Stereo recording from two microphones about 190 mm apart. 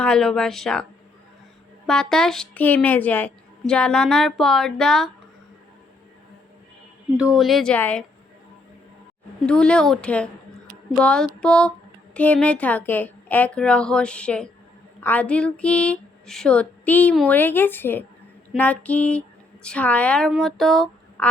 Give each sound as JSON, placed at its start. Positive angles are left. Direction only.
{"t": 0.0, "sound": "speech", "side_deg": 5}
{"t": 1.9, "sound": "speech", "side_deg": 5}
{"t": 7.2, "sound": "speech", "side_deg": 0}
{"t": 9.5, "sound": "speech", "side_deg": 5}